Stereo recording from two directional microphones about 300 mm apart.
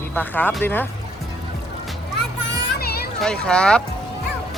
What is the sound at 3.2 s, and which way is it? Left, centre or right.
Speech, centre.